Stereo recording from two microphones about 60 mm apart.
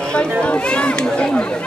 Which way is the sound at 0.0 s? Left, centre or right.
Centre.